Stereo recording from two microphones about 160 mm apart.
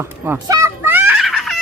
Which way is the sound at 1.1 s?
Centre (ahead or behind).